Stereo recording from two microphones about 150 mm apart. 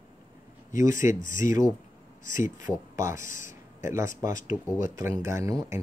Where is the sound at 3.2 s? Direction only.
60° left (ahead or behind).